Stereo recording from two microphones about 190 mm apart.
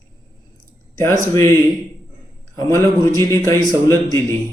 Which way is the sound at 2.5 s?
15° left (ahead or behind).